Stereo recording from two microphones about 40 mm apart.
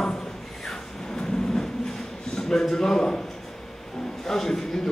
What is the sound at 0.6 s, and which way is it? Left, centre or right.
Vehicle, centre.